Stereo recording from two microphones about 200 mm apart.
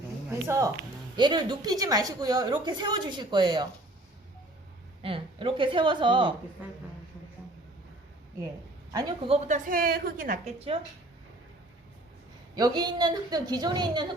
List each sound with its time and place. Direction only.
0.3 s a woman's voice: 15° right (ahead or behind)
5.0 s a woman's voice: 25° right (ahead or behind)
8.9 s a woman's voice: 20° right (ahead or behind)
9.6 s a woman's voice: 45° right (ahead or behind)
12.5 s a woman's voice: 20° right (ahead or behind)